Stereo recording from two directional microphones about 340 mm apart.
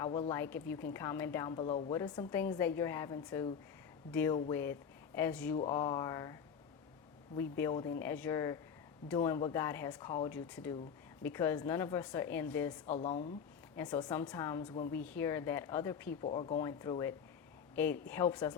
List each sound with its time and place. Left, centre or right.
0.0 s a woman's voice: centre
7.3 s a woman's voice: centre
12.9 s a woman's voice: centre